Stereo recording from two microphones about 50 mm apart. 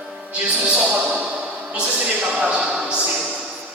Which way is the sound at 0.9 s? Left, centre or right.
Right.